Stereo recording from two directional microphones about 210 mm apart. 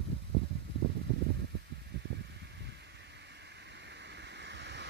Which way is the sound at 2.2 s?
55° right (ahead or behind).